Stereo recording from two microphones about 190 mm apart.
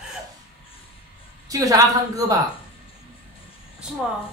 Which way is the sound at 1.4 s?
20° right (ahead or behind).